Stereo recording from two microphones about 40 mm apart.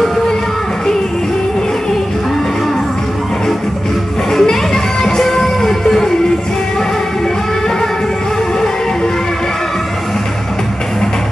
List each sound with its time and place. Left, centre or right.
4.3 s music: centre